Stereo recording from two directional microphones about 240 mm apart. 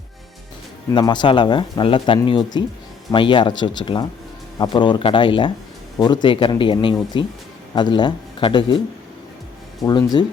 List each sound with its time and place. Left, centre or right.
0.9 s speech: centre
9.8 s speech: centre